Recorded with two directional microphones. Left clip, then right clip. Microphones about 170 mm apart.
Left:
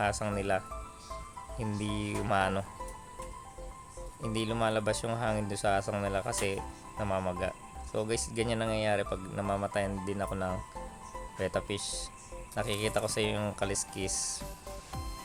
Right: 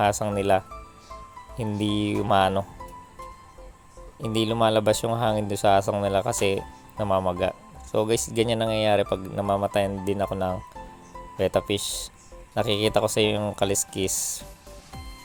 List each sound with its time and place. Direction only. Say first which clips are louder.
0.0 s speech: right 9 dB; 30° right (ahead or behind)
4.2 s speech: right 9 dB; 30° right (ahead or behind)